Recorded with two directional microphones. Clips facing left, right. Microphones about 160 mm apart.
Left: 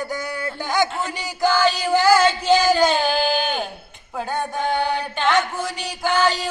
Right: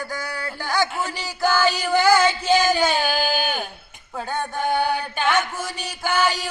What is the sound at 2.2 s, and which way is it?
Speech, 10° right (ahead or behind).